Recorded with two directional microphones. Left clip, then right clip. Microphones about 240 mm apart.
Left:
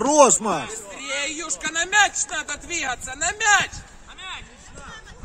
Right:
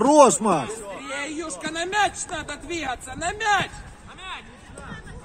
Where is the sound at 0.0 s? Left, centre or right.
Centre.